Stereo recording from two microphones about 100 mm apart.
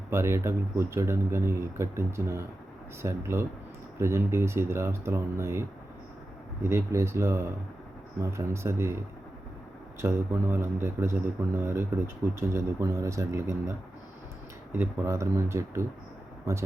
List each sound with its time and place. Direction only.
0.1 s a man's voice: 25° right (ahead or behind)
10.0 s a man's voice: 25° right (ahead or behind)